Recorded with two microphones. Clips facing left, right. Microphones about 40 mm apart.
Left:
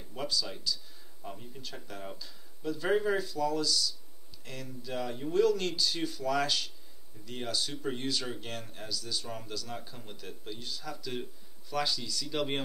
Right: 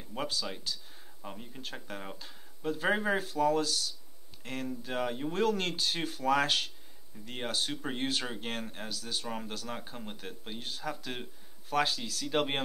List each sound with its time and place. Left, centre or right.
0.1 s speech: right
1.2 s speech: right
1.6 s speech: right